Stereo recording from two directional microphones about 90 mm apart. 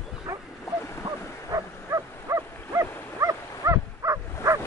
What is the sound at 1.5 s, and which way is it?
Dog, 40° right (ahead or behind).